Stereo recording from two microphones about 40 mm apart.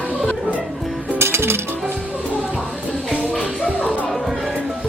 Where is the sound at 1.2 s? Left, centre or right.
Right.